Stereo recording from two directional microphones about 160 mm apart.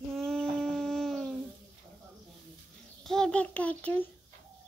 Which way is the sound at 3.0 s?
5° left (ahead or behind).